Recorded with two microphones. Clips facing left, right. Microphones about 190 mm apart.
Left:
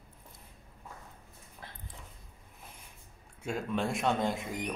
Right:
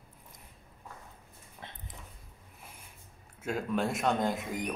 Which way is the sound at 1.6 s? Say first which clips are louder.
Right 2 dB; 20° right (ahead or behind).